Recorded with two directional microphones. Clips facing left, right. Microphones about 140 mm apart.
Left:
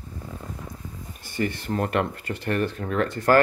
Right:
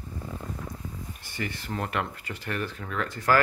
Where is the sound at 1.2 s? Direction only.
45° left (ahead or behind).